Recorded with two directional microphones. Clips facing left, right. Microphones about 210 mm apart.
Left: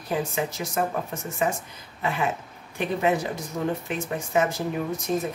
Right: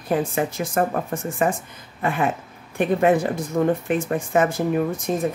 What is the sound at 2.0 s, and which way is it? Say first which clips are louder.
Speech: right 4 dB; 50° right (ahead or behind).